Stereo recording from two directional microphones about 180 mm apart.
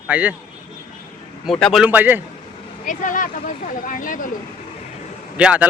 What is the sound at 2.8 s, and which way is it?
Speech, 45° left (ahead or behind).